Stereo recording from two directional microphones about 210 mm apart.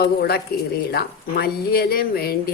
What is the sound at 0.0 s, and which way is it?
Speech, 50° left (ahead or behind).